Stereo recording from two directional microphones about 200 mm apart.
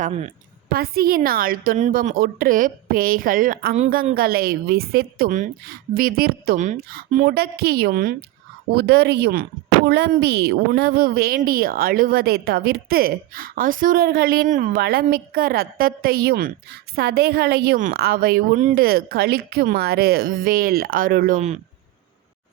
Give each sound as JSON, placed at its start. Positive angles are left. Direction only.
{"t": 0.0, "sound": "a woman's voice", "side_deg": -35}
{"t": 0.7, "sound": "speech", "side_deg": -50}
{"t": 7.3, "sound": "speech", "side_deg": -50}